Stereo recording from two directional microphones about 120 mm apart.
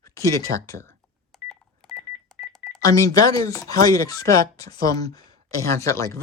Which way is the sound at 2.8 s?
30° left (ahead or behind).